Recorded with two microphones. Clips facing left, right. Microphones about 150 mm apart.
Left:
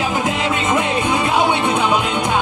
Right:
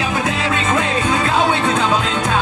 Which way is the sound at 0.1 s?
20° left (ahead or behind).